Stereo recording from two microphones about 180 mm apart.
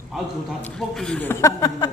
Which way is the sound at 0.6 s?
5° left (ahead or behind).